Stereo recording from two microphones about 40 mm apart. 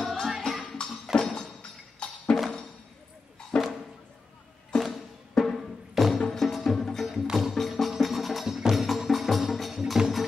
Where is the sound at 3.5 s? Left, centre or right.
Left.